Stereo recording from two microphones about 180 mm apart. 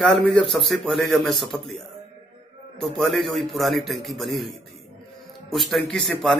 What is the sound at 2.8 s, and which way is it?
Speech, centre (ahead or behind).